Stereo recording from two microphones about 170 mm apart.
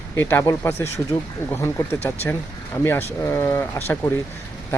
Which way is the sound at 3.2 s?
15° left (ahead or behind).